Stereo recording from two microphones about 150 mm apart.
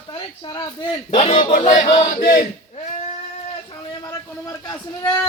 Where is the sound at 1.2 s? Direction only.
45° left (ahead or behind).